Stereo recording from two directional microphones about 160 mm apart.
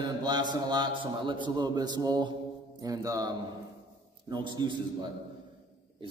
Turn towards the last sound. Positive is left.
turn(degrees=-30)  # may be behind; listen again after turning